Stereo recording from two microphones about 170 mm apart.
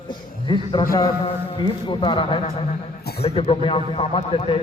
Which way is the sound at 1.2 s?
30° left (ahead or behind).